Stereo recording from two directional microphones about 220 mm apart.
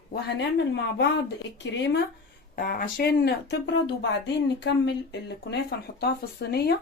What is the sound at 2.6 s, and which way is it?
Speech, 40° left (ahead or behind).